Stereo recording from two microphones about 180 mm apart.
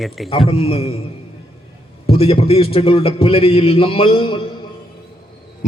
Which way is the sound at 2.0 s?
30° left (ahead or behind).